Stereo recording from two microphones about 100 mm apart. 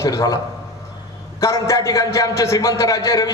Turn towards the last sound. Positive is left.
turn(degrees=35)  # may be behind; listen again after turning